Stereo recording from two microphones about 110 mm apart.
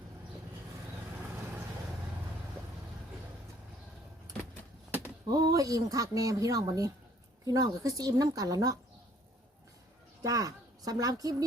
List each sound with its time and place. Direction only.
5.3 s speech: 35° right (ahead or behind)
10.2 s speech: 30° right (ahead or behind)